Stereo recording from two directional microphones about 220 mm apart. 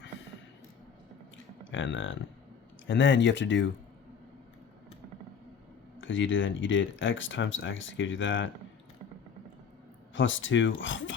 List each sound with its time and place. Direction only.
1.7 s speech: 60° left (ahead or behind)
6.0 s speech: 60° left (ahead or behind)
10.2 s speech: 60° left (ahead or behind)